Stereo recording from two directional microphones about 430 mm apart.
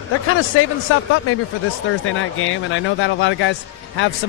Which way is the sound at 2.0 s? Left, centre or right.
Left.